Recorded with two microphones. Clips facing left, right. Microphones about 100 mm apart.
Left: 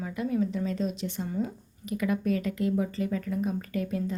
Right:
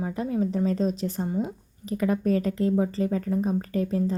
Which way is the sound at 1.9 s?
35° right (ahead or behind).